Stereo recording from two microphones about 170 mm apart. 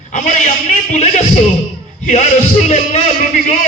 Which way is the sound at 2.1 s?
45° left (ahead or behind).